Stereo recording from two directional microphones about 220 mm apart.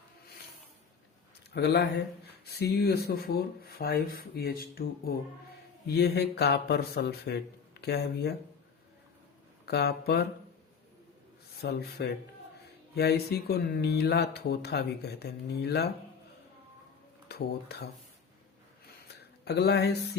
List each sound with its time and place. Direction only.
1.5 s speech: 50° left (ahead or behind)
9.6 s speech: 50° left (ahead or behind)
11.6 s speech: 45° left (ahead or behind)
17.2 s speech: 45° left (ahead or behind)
19.0 s a sound: 50° left (ahead or behind)